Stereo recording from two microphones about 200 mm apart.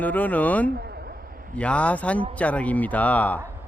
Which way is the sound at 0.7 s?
50° right (ahead or behind).